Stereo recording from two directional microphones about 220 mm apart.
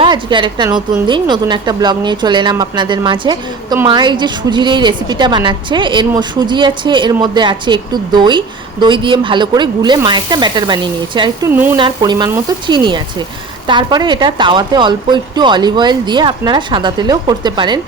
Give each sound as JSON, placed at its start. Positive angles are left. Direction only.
{"t": 0.0, "sound": "a woman's voice", "side_deg": -20}
{"t": 11.5, "sound": "a woman's voice", "side_deg": -10}